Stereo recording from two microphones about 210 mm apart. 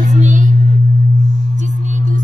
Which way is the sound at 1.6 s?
35° right (ahead or behind).